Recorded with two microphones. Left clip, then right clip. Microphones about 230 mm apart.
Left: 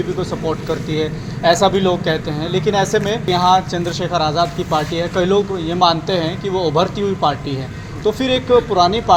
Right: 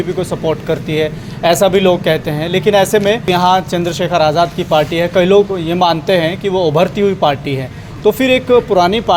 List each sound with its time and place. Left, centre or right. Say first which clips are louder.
0.3 s speech: right 5 dB; right